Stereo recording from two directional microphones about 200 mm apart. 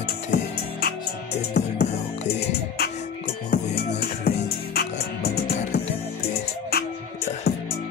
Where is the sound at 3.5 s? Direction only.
55° left (ahead or behind).